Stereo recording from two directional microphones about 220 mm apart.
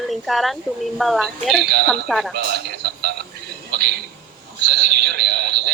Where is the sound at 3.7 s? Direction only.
45° right (ahead or behind).